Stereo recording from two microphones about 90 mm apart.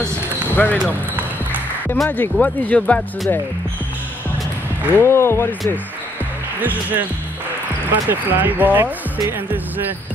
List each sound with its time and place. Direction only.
0.6 s speech: 20° left (ahead or behind)
2.0 s speech: 20° left (ahead or behind)
4.9 s speech: 30° left (ahead or behind)
6.6 s speech: 20° right (ahead or behind)